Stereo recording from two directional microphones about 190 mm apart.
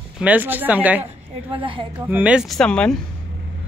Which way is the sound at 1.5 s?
25° right (ahead or behind).